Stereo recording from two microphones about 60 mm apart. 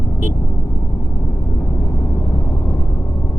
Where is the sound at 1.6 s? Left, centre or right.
Left.